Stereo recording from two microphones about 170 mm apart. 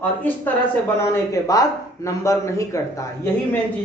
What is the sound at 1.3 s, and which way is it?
A woman's voice, 20° left (ahead or behind).